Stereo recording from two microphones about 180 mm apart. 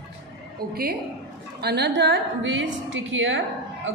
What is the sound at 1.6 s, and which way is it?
A woman's voice, 65° right (ahead or behind).